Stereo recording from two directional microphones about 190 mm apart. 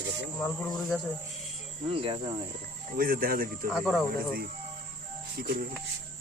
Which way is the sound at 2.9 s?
50° right (ahead or behind).